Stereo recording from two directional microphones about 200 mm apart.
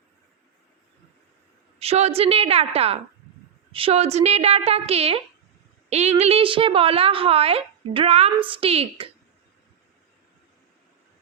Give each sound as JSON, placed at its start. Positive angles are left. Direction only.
{"t": 1.8, "sound": "a woman's voice", "side_deg": -30}